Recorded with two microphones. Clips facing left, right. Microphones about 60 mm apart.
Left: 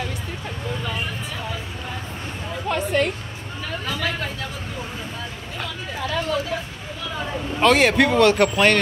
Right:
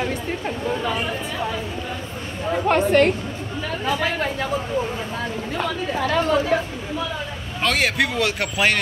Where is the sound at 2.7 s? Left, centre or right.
Right.